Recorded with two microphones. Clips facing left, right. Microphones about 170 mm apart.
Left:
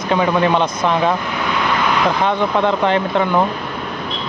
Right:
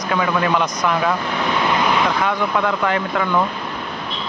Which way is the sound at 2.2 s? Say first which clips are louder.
Left 3 dB; 30° left (ahead or behind).